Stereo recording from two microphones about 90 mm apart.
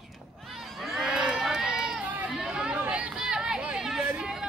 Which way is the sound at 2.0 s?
15° right (ahead or behind).